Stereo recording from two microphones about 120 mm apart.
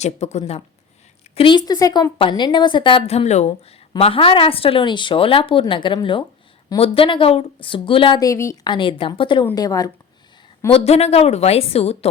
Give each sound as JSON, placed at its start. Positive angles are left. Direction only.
{"t": 0.0, "sound": "speech", "side_deg": 70}
{"t": 1.4, "sound": "a woman's voice", "side_deg": 40}
{"t": 3.1, "sound": "a woman's voice", "side_deg": 65}
{"t": 3.9, "sound": "speech", "side_deg": 50}
{"t": 8.2, "sound": "speech", "side_deg": 25}
{"t": 8.6, "sound": "speech", "side_deg": 40}
{"t": 9.6, "sound": "a woman's voice", "side_deg": 30}
{"t": 10.7, "sound": "a woman's voice", "side_deg": 55}